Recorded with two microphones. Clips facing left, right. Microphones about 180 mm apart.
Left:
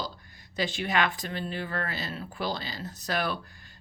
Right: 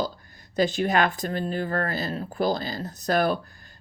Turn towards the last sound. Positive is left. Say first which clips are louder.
# right 8 dB
turn(degrees=-45)  # may be behind; listen again after turning